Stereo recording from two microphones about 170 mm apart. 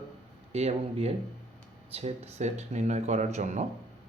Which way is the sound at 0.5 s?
40° right (ahead or behind).